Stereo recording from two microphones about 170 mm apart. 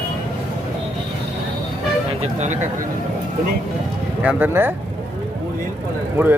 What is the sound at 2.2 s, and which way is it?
Speech, 45° right (ahead or behind).